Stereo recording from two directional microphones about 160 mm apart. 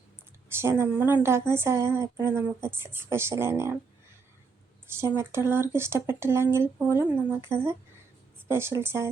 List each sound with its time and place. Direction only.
0.5 s a woman's voice: 15° right (ahead or behind)
4.9 s a woman's voice: 15° right (ahead or behind)